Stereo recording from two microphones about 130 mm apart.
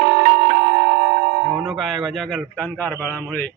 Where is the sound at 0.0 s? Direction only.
90° right.